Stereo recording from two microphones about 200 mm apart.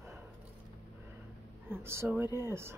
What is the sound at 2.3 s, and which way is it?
Speech, 10° right (ahead or behind).